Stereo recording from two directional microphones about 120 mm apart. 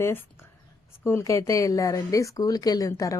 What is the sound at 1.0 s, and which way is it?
Speech, 25° left (ahead or behind).